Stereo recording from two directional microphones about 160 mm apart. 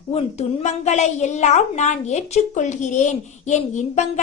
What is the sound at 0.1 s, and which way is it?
A woman's voice, 40° left (ahead or behind).